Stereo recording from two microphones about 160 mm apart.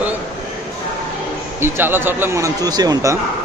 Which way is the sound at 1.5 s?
15° right (ahead or behind).